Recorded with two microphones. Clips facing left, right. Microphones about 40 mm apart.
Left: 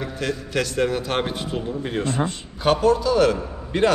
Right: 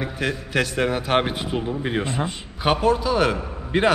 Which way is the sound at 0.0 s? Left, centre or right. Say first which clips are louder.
Right 1 dB; centre.